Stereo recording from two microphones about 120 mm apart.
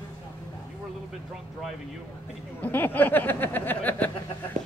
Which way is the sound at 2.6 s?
15° left (ahead or behind).